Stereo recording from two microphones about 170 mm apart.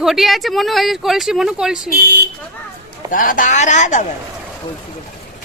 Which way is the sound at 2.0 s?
70° right (ahead or behind).